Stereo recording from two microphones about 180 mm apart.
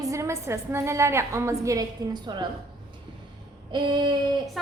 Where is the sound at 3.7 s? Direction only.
25° right (ahead or behind).